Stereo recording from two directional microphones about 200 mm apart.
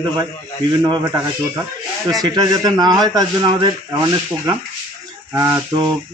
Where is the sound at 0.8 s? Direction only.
15° right (ahead or behind).